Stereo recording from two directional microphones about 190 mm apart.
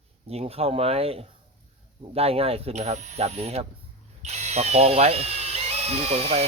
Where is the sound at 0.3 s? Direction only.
30° right (ahead or behind).